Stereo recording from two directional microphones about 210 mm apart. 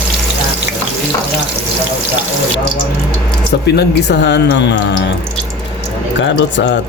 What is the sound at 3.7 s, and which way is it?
Speech, 55° left (ahead or behind).